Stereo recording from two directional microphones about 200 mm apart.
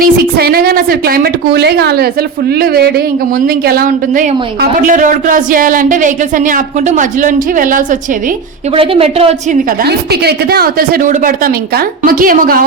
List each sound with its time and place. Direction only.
0.0 s a woman's voice: 50° right (ahead or behind)
8.7 s a woman's voice: 30° right (ahead or behind)
9.8 s a woman's voice: 55° right (ahead or behind)